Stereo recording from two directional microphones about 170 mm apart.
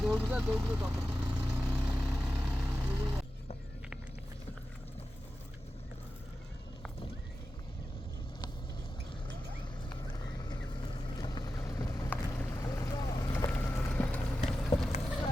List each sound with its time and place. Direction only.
0.0 s vehicle: 5° right (ahead or behind)
9.9 s vehicle: 25° left (ahead or behind)
13.3 s vehicle: 15° left (ahead or behind)